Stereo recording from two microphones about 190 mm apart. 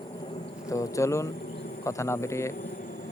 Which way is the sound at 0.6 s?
15° left (ahead or behind).